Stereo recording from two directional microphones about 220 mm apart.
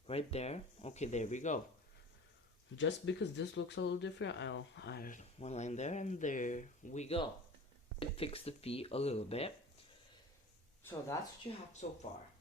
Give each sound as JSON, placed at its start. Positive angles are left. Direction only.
{"t": 0.1, "sound": "speech", "side_deg": 25}
{"t": 2.7, "sound": "speech", "side_deg": 55}
{"t": 11.5, "sound": "speech", "side_deg": 20}
{"t": 11.8, "sound": "speech", "side_deg": 35}